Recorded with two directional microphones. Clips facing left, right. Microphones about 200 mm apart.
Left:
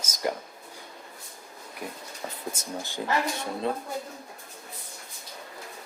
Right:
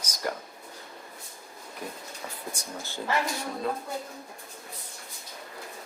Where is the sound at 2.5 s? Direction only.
20° left (ahead or behind).